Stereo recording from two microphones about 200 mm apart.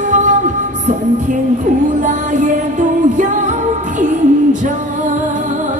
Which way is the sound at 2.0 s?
40° right (ahead or behind).